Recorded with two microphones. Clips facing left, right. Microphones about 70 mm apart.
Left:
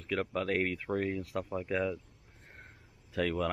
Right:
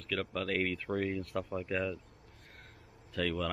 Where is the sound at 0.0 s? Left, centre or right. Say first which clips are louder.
Left 3 dB; centre.